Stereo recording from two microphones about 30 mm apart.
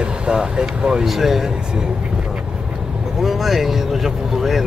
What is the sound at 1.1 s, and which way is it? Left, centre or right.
Speech, centre.